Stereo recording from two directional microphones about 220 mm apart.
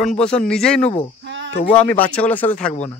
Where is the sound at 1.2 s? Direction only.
55° right (ahead or behind).